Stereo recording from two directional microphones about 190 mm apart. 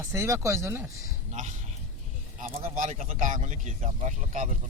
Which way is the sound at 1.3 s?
40° right (ahead or behind).